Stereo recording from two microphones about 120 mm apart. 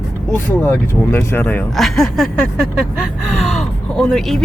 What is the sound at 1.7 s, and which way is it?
A woman's voice, centre (ahead or behind).